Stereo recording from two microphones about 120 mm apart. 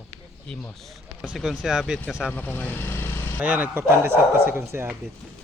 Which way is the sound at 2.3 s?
15° left (ahead or behind).